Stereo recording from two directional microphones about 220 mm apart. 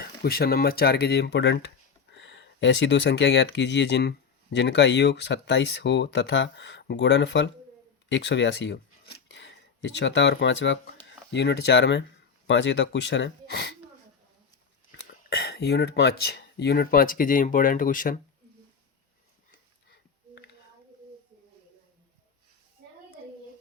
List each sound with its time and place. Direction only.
0.0 s speech: 45° left (ahead or behind)
15.0 s speech: 45° left (ahead or behind)